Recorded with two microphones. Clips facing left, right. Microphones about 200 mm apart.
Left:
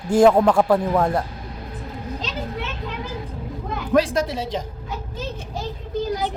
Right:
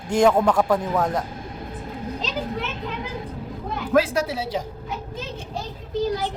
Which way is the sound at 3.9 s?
10° right (ahead or behind).